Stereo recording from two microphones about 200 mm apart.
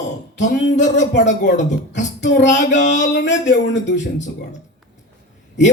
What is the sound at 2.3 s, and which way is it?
Speech, 60° left (ahead or behind).